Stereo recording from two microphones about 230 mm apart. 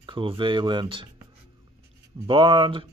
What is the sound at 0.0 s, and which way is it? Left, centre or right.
Speech, right.